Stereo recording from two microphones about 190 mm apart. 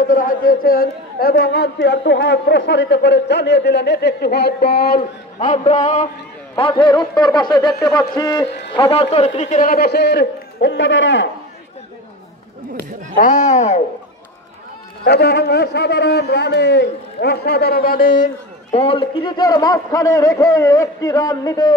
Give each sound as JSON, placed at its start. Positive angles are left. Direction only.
{"t": 0.1, "sound": "a man's voice", "side_deg": 45}
{"t": 6.5, "sound": "a man's voice", "side_deg": 25}
{"t": 13.1, "sound": "a man's voice", "side_deg": 40}
{"t": 15.0, "sound": "a man's voice", "side_deg": 60}
{"t": 18.2, "sound": "a man's voice", "side_deg": 35}